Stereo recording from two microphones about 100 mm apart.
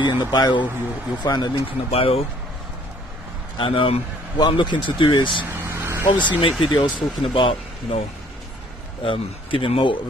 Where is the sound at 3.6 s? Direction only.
65° left (ahead or behind).